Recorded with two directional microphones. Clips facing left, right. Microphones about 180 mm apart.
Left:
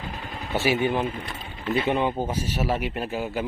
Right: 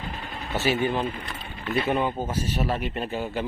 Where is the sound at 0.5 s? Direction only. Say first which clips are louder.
Left 1 dB; 10° left (ahead or behind).